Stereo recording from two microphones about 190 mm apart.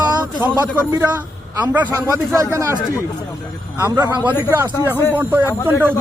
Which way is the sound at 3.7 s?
10° right (ahead or behind).